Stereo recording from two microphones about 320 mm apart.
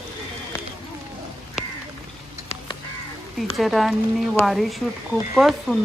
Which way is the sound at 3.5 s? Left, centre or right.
Centre.